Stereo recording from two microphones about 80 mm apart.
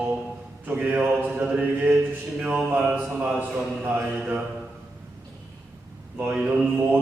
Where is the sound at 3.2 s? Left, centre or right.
Centre.